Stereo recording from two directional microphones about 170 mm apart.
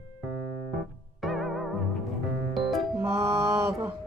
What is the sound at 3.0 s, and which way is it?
Mantra, 15° right (ahead or behind).